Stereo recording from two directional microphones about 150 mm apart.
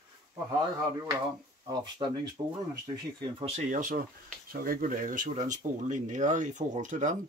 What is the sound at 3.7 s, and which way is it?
Speech, 60° right (ahead or behind).